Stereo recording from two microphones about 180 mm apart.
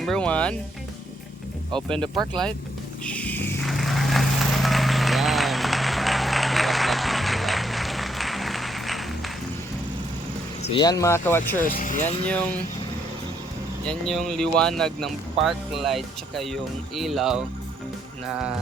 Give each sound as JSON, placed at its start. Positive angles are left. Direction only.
{"t": 0.0, "sound": "speech", "side_deg": 5}
{"t": 2.0, "sound": "speech", "side_deg": -25}
{"t": 3.0, "sound": "a sound", "side_deg": 5}
{"t": 3.6, "sound": "run", "side_deg": 0}
{"t": 10.8, "sound": "speech", "side_deg": 20}
{"t": 11.6, "sound": "speech", "side_deg": 50}
{"t": 12.2, "sound": "speech", "side_deg": 5}
{"t": 13.8, "sound": "speech", "side_deg": 0}